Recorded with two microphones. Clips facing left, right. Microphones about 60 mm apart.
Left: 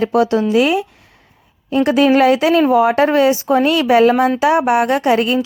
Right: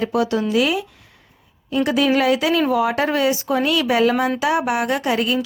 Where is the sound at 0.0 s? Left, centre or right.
Left.